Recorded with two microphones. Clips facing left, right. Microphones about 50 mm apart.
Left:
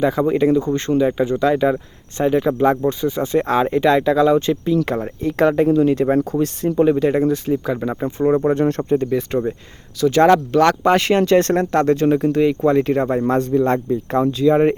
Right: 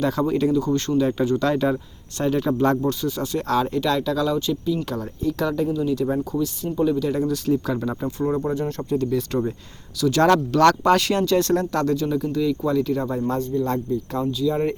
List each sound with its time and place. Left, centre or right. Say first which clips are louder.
0.0 s speech: left 5 dB; left
7.3 s speech: left 3 dB; left
8.4 s speech: left 8 dB; left
8.8 s speech: left 4 dB; left